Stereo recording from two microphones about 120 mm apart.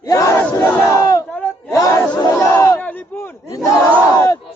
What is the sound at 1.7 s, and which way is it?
Chatter, 25° left (ahead or behind).